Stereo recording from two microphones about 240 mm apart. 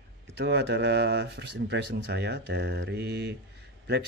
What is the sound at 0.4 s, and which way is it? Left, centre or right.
Speech, right.